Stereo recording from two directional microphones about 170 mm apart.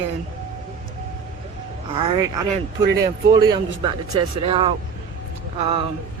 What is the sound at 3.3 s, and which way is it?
A man's voice, 25° right (ahead or behind).